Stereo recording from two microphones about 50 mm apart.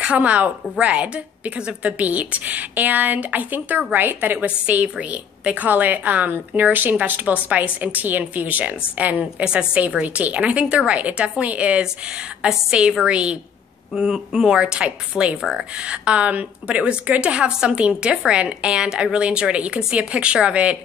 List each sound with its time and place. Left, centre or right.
0.0 s a woman's voice: right
9.2 s a woman's voice: centre